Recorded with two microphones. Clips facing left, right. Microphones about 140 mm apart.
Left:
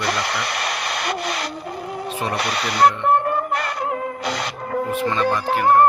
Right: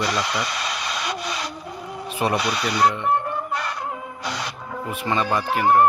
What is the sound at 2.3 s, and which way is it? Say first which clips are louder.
Music: left 1 dB; 65° left (ahead or behind).